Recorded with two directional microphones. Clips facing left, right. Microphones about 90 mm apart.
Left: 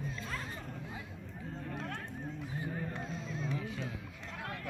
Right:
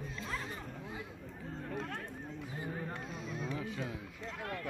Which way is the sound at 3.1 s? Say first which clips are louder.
Even; 10° right (ahead or behind).